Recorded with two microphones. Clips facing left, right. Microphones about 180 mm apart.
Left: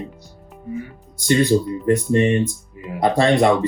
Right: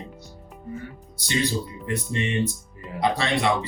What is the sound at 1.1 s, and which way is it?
Speech, 50° left (ahead or behind).